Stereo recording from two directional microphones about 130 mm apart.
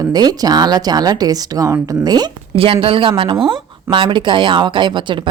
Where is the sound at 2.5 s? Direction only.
45° right (ahead or behind).